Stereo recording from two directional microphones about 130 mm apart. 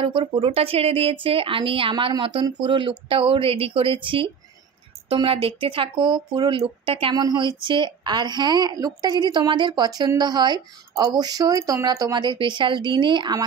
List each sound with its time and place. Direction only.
0.0 s speech: 45° right (ahead or behind)
7.2 s speech: 35° right (ahead or behind)